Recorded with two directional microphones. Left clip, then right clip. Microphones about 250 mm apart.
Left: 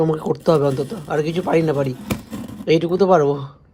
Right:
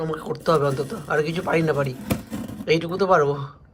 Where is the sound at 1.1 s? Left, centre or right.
Centre.